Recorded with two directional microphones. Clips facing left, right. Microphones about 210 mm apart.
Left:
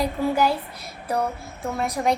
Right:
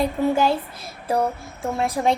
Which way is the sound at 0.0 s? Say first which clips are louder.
Right 2 dB; 25° right (ahead or behind).